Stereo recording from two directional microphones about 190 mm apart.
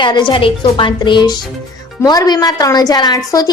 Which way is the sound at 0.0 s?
25° left (ahead or behind).